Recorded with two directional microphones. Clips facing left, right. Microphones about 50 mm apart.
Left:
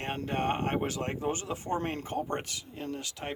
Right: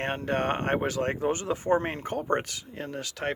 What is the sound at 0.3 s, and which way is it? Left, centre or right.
Speech, right.